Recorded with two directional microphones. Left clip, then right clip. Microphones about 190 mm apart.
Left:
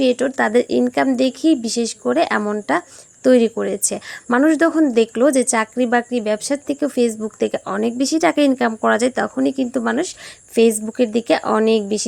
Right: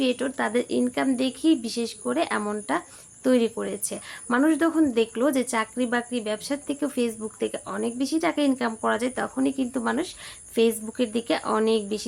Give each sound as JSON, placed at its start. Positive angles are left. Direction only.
{"t": 0.0, "sound": "speech", "side_deg": 35}